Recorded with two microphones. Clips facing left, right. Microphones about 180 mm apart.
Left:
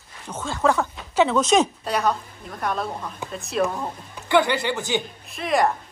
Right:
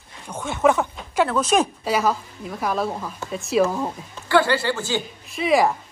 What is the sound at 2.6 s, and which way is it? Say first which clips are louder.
A woman's voice: right 2 dB; 5° right (ahead or behind).